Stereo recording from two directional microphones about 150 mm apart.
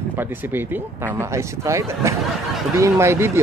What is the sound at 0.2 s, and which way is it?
Speech, 15° right (ahead or behind).